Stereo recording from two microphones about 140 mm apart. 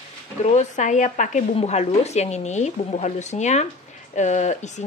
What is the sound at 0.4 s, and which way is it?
Speech, 55° left (ahead or behind).